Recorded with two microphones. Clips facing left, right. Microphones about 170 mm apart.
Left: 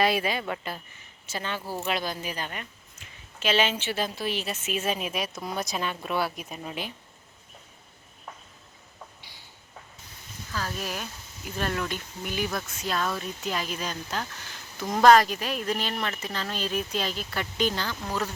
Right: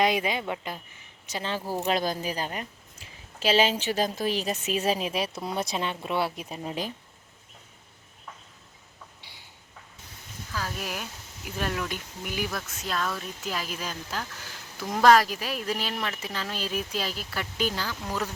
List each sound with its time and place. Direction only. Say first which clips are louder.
0.0 s speech: even; 20° right (ahead or behind)
1.8 s speech: right 4 dB; 40° right (ahead or behind)
10.5 s speech: left 1 dB; 10° right (ahead or behind)